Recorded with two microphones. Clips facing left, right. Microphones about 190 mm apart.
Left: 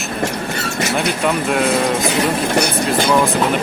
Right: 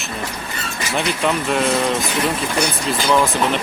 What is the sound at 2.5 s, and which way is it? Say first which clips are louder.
Speech: left 4 dB; 65° left (ahead or behind).